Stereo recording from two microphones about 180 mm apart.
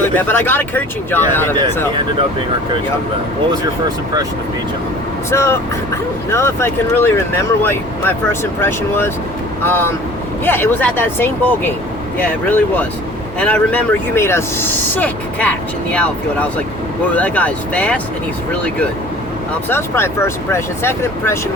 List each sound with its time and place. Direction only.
0.2 s speech: 10° left (ahead or behind)
3.5 s speech: 20° right (ahead or behind)
5.3 s speech: 15° left (ahead or behind)
19.6 s speech: 15° left (ahead or behind)